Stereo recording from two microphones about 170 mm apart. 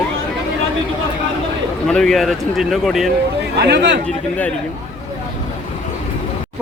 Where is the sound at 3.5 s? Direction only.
80° right.